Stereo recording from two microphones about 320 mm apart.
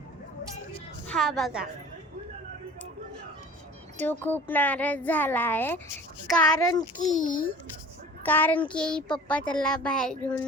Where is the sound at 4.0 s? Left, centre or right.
Centre.